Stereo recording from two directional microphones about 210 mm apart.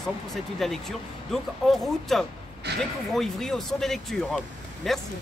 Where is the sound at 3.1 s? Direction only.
Centre (ahead or behind).